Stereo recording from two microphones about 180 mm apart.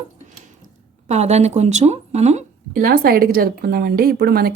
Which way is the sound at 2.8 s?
55° right (ahead or behind).